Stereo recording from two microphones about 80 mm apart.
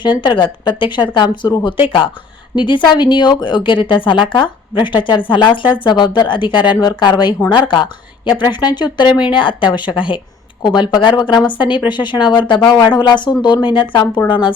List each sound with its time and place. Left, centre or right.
0.0 s speech: left
2.6 s speech: left
5.0 s speech: left
7.5 s speech: left
9.2 s speech: left
10.6 s speech: left
11.9 s speech: left
14.3 s speech: left